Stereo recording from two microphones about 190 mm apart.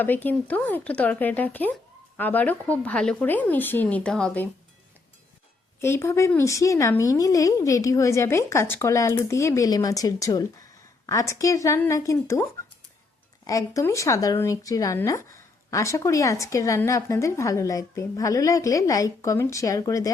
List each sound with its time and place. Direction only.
0.0 s speech: 10° left (ahead or behind)
5.8 s speech: 15° left (ahead or behind)